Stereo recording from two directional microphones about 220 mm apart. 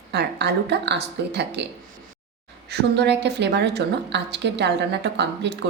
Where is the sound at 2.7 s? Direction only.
50° right (ahead or behind).